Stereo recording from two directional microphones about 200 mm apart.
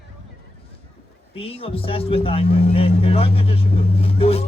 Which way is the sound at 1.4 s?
30° left (ahead or behind).